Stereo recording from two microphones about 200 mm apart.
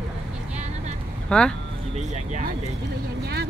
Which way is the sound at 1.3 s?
5° left (ahead or behind).